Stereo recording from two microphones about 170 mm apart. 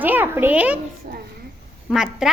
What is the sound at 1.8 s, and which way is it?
Speech, 5° right (ahead or behind).